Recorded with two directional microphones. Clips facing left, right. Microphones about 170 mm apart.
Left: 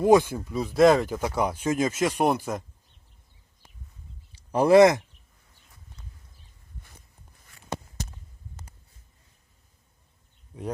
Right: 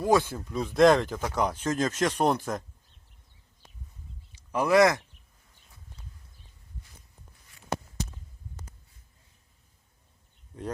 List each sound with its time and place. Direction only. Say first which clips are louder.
0.0 s speech: left 5 dB; 15° left (ahead or behind)
4.3 s speech: left 6 dB; 35° left (ahead or behind)